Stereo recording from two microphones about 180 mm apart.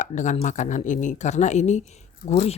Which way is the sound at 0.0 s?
45° left (ahead or behind).